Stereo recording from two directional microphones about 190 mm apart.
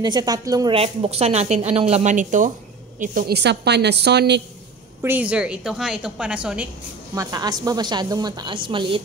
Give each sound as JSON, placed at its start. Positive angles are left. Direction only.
{"t": 0.0, "sound": "a woman's voice", "side_deg": -20}
{"t": 0.7, "sound": "a woman's voice", "side_deg": -30}
{"t": 5.0, "sound": "a woman's voice", "side_deg": -10}
{"t": 7.2, "sound": "a woman's voice", "side_deg": -20}